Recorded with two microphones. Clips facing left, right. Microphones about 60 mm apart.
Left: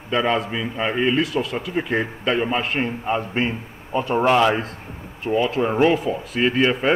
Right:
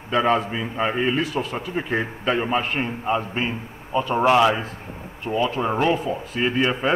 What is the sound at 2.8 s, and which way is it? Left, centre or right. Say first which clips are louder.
A man's voice: left 1 dB; centre.